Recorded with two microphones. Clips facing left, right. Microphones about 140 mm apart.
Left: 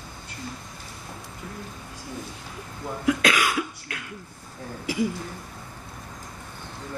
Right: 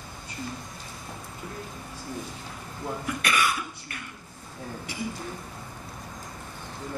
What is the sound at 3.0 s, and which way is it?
Cough, 90° left.